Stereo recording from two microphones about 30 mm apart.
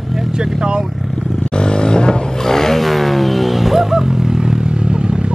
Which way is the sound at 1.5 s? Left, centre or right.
Left.